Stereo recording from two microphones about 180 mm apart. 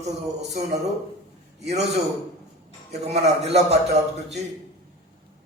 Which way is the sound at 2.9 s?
35° right (ahead or behind).